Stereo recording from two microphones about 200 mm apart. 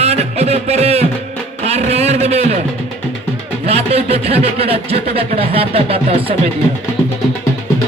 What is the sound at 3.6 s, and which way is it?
Speech, 30° right (ahead or behind).